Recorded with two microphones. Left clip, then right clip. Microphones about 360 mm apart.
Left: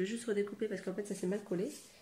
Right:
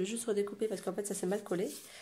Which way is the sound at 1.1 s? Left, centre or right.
Right.